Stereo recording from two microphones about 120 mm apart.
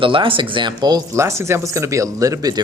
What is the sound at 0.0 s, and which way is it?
Speech, 45° right (ahead or behind).